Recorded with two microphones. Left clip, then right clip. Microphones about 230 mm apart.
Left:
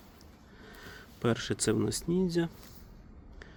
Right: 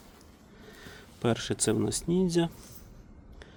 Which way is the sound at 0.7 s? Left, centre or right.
Centre.